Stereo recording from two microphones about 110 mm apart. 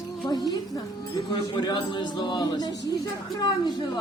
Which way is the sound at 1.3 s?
45° left (ahead or behind).